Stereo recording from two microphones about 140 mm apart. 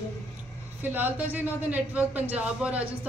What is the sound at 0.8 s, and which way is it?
A woman's voice, 15° right (ahead or behind).